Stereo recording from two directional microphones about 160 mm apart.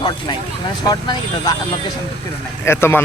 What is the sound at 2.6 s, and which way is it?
Speech, 15° left (ahead or behind).